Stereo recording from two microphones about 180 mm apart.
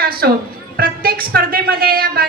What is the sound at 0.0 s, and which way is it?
A woman's voice, 55° right (ahead or behind).